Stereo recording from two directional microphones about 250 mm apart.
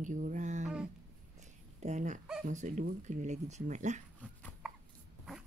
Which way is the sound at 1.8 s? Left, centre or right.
Right.